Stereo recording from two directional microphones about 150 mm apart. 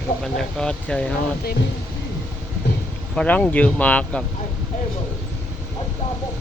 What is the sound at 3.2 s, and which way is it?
Speech, 10° left (ahead or behind).